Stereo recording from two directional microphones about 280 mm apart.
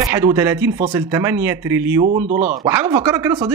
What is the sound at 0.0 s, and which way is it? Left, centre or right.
Speech, centre.